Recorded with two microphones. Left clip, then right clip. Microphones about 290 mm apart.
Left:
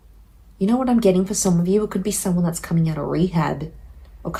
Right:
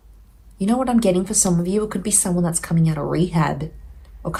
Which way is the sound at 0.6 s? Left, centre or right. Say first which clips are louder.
Even; right.